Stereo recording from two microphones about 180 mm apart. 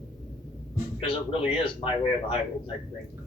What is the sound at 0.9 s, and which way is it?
Speech, 30° left (ahead or behind).